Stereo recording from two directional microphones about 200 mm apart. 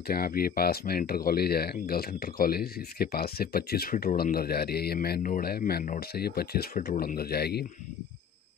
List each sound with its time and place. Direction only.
0.1 s speech: 50° left (ahead or behind)